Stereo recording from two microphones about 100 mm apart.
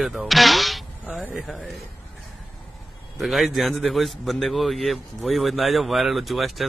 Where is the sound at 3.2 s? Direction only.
Centre (ahead or behind).